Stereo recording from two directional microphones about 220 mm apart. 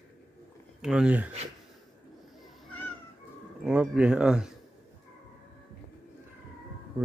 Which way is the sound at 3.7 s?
5° right (ahead or behind).